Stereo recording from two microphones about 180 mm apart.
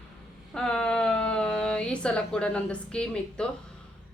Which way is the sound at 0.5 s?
5° left (ahead or behind).